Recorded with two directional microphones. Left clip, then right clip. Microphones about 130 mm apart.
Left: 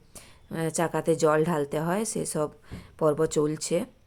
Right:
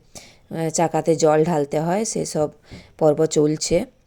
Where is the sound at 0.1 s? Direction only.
25° right (ahead or behind).